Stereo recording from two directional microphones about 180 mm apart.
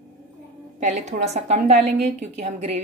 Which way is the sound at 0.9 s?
40° right (ahead or behind).